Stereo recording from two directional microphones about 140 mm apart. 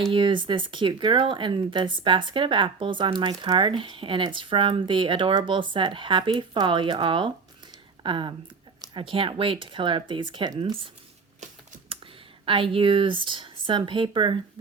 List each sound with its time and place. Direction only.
0.1 s speech: 35° right (ahead or behind)
12.5 s speech: 40° right (ahead or behind)